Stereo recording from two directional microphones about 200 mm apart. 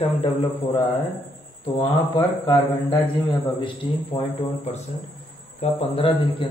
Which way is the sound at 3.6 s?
30° left (ahead or behind).